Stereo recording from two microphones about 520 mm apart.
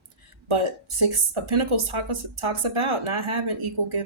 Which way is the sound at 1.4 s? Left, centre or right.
Right.